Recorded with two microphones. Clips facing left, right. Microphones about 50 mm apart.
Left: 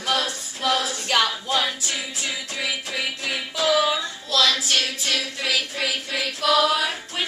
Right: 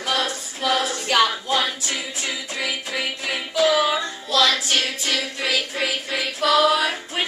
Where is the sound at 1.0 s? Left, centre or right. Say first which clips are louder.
Right 4 dB; centre.